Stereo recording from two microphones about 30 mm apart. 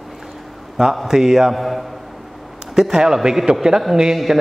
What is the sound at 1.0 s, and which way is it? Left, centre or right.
Speech, centre.